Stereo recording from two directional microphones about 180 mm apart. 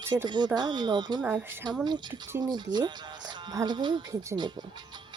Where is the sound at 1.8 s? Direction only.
25° right (ahead or behind).